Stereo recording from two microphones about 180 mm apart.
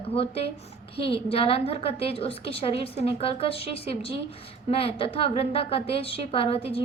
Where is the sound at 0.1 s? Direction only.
35° left (ahead or behind).